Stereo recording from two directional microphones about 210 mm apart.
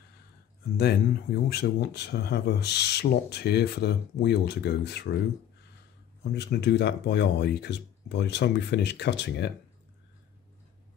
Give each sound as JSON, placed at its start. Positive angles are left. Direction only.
{"t": 0.7, "sound": "speech", "side_deg": 50}
{"t": 6.3, "sound": "speech", "side_deg": 55}